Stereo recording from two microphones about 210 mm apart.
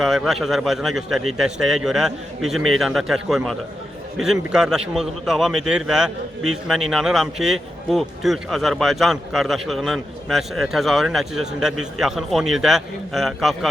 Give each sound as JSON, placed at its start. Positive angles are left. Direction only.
{"t": 0.0, "sound": "speech", "side_deg": 0}